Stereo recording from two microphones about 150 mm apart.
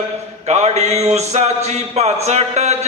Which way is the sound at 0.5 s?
45° right (ahead or behind).